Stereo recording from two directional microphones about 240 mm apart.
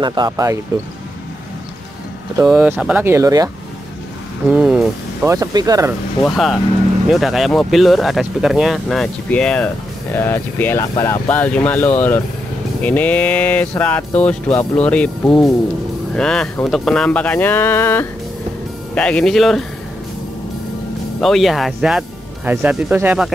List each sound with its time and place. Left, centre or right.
0.0 s speech: centre
2.4 s speech: centre
4.5 s speech: centre
6.2 s speech: centre
21.2 s speech: centre